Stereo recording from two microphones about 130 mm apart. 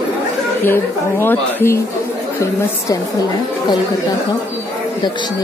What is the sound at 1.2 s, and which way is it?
Speech, 15° left (ahead or behind).